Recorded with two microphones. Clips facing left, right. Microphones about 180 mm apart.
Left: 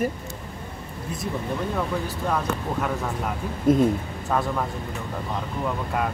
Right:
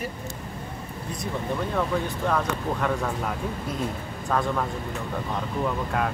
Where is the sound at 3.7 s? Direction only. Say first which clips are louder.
Left 18 dB; 50° left (ahead or behind).